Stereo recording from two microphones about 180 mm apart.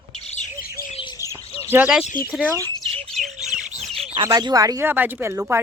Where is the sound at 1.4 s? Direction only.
35° left (ahead or behind).